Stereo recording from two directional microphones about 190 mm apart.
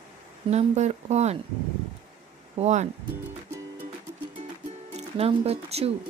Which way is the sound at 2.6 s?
35° right (ahead or behind).